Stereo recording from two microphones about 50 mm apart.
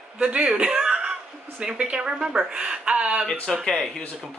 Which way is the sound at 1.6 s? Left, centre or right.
Centre.